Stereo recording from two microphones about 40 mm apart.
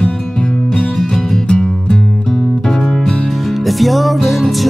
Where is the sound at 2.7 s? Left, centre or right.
Centre.